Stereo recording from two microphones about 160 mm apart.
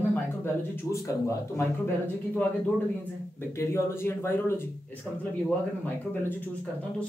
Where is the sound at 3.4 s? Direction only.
15° left (ahead or behind).